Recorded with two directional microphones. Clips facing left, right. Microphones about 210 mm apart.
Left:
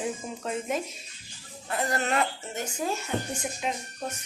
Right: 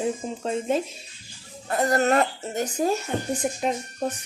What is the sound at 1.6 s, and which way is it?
A woman's voice, 45° right (ahead or behind).